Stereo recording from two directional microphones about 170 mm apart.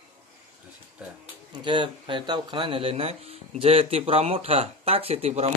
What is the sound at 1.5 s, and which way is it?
Speech, 25° right (ahead or behind).